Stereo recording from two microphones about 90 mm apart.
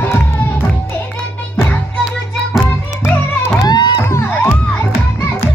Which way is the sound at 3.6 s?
55° left (ahead or behind).